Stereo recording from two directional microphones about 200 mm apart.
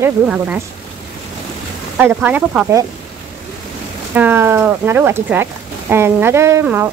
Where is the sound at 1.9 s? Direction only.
10° right (ahead or behind).